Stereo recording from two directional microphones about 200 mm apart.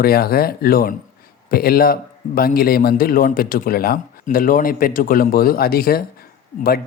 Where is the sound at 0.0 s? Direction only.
50° left (ahead or behind).